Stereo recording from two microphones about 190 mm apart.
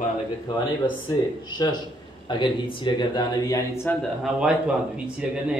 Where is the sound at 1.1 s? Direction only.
20° left (ahead or behind).